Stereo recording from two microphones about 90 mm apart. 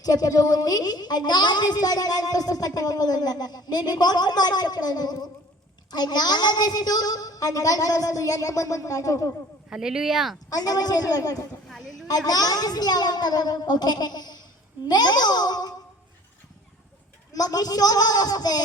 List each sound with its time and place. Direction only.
0.0 s a woman's voice: 45° left (ahead or behind)
9.6 s speech: 5° right (ahead or behind)
10.5 s a woman's voice: 45° left (ahead or behind)
11.7 s a sound: centre (ahead or behind)
12.0 s a woman's voice: 45° left (ahead or behind)
17.3 s a woman's voice: 45° left (ahead or behind)